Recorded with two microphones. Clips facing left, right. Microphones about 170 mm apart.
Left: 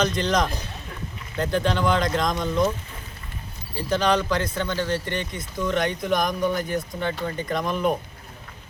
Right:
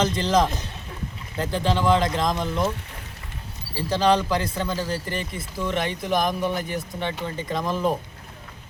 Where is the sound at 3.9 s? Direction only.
30° right (ahead or behind).